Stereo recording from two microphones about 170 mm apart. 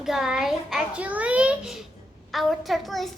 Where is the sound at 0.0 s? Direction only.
5° right (ahead or behind).